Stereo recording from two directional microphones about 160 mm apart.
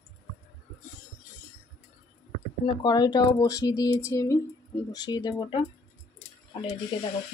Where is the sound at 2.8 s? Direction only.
25° left (ahead or behind).